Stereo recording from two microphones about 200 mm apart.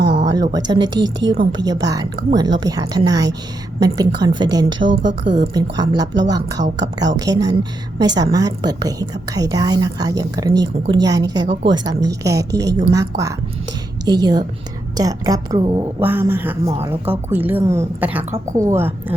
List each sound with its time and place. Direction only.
0.5 s a woman's voice: 20° right (ahead or behind)
1.2 s a woman's voice: 65° right (ahead or behind)
1.5 s a woman's voice: 20° right (ahead or behind)
4.9 s a woman's voice: 65° right (ahead or behind)
5.5 s a woman's voice: 20° right (ahead or behind)
6.6 s a woman's voice: 35° right (ahead or behind)
7.2 s a woman's voice: 20° right (ahead or behind)
16.0 s a woman's voice: 10° right (ahead or behind)